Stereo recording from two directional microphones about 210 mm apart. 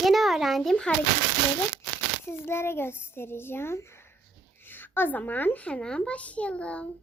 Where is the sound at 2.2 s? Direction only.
10° left (ahead or behind).